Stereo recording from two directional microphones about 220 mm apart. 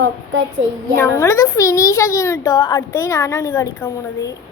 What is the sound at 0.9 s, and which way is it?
A woman's voice, 10° left (ahead or behind).